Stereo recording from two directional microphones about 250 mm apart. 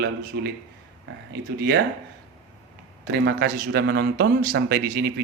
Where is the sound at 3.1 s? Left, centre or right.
Right.